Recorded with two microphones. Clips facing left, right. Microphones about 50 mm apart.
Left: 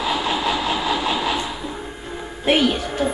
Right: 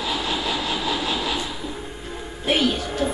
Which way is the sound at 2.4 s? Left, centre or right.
Left.